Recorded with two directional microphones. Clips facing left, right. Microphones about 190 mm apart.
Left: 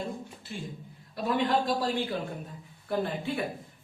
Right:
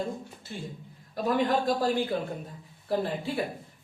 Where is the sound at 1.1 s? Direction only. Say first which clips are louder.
Right 1 dB; 45° right (ahead or behind).